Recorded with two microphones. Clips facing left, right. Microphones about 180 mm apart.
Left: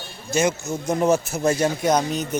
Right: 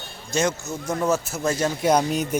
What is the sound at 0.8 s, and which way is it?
Speech, 20° left (ahead or behind).